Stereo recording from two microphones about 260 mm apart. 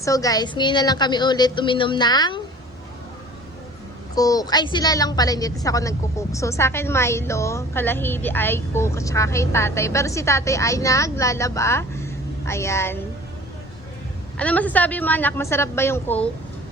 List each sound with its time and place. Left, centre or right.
0.0 s a woman's voice: centre
4.1 s a woman's voice: centre
14.3 s a woman's voice: centre